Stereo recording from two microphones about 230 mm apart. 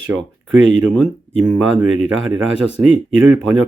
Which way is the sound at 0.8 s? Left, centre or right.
Centre.